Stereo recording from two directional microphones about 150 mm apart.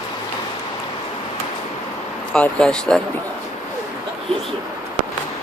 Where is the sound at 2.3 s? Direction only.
5° left (ahead or behind).